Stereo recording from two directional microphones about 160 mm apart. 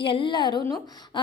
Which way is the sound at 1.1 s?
30° left (ahead or behind).